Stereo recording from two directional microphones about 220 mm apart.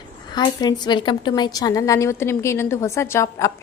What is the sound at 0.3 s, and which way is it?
A woman's voice, 20° left (ahead or behind).